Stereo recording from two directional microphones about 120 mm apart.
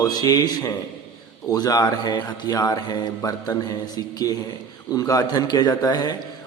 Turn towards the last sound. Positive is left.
turn(degrees=35)  # may be behind; listen again after turning